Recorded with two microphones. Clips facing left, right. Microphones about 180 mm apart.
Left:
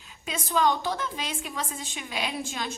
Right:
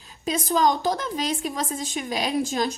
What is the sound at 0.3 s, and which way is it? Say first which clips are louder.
A woman's voice: right 4 dB; 40° right (ahead or behind).